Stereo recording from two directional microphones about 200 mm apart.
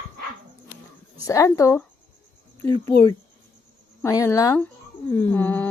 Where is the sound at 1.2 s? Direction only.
15° left (ahead or behind).